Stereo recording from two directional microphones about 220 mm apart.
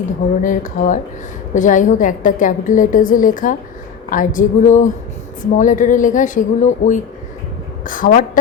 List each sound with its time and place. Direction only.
0.4 s a woman's voice: 35° left (ahead or behind)